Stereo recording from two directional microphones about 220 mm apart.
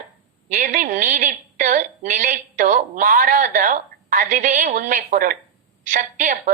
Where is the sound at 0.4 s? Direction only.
35° right (ahead or behind).